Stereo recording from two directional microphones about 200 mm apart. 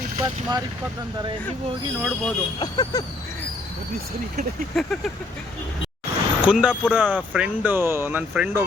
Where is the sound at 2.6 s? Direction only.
20° left (ahead or behind).